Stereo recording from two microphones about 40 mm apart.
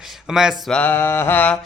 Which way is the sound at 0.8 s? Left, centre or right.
Left.